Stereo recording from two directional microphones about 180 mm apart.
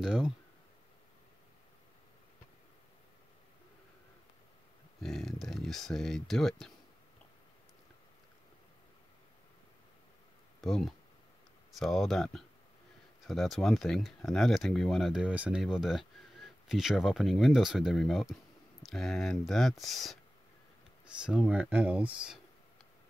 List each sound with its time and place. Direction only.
0.0 s speech: 5° right (ahead or behind)
5.0 s speech: centre (ahead or behind)
10.6 s speech: centre (ahead or behind)